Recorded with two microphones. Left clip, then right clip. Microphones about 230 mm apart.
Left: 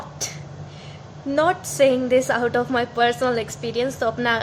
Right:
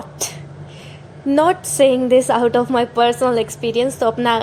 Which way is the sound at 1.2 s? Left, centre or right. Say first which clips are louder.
Right 5 dB; centre.